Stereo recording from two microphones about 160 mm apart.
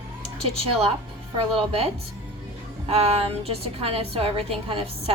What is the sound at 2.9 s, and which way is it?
A woman's voice, 40° right (ahead or behind).